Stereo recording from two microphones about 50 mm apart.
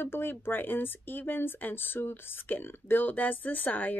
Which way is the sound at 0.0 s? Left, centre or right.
Left.